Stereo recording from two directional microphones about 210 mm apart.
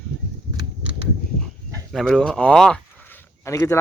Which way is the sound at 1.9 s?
Centre (ahead or behind).